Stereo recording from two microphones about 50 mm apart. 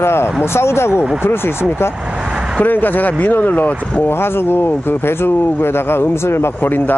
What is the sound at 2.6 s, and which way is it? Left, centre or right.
Speech, left.